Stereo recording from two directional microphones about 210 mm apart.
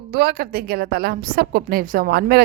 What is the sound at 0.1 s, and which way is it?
A woman's voice, 50° right (ahead or behind).